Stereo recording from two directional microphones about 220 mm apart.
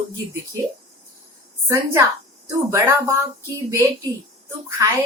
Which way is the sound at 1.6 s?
10° right (ahead or behind).